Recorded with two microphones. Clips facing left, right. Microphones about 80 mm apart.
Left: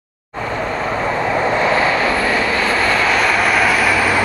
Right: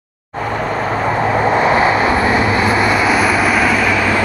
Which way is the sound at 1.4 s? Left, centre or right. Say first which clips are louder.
Right 3 dB; centre.